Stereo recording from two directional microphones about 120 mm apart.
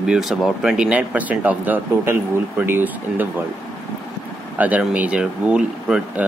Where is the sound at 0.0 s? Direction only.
5° right (ahead or behind).